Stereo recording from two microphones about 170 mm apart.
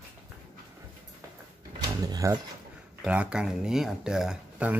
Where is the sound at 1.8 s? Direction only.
20° right (ahead or behind).